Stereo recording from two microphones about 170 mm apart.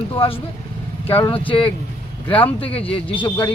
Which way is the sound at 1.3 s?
30° left (ahead or behind).